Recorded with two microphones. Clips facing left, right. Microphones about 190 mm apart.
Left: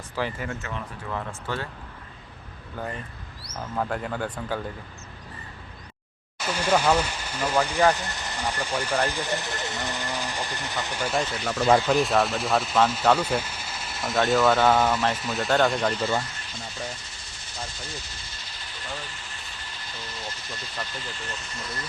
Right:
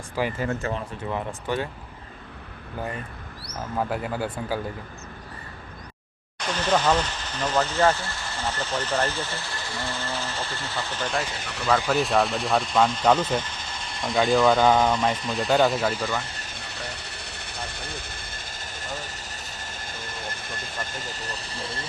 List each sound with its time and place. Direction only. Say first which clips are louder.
0.3 s speech: right 6 dB; 35° right (ahead or behind)
1.1 s speech: right 3 dB; 15° right (ahead or behind)
3.8 s speech: right 1 dB; 5° right (ahead or behind)
6.4 s speech: even; 10° left (ahead or behind)
11.9 s speech: even; centre (ahead or behind)
16.6 s vehicle: left 3 dB; 70° right (ahead or behind); by 21.8 s 30° right (ahead or behind)